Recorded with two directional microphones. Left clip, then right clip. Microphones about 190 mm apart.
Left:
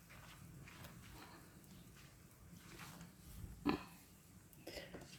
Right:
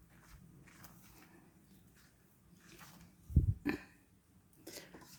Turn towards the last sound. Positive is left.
turn(degrees=-20)  # may be behind; listen again after turning